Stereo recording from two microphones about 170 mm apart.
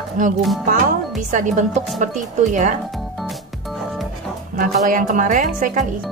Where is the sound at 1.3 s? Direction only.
50° right (ahead or behind).